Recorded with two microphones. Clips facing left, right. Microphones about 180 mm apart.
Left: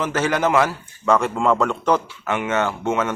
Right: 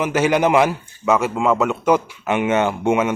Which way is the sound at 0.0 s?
10° right (ahead or behind).